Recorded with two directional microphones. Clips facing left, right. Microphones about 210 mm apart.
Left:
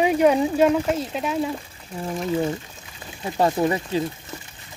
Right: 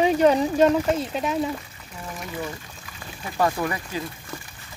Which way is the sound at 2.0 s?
30° left (ahead or behind).